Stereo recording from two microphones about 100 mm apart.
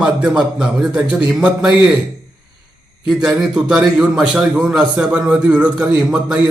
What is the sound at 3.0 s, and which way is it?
A man's voice, 5° right (ahead or behind).